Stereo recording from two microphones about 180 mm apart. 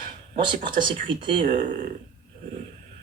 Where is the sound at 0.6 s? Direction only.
30° right (ahead or behind).